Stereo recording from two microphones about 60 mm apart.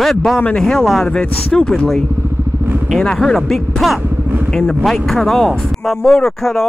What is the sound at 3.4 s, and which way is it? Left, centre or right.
Speech, centre.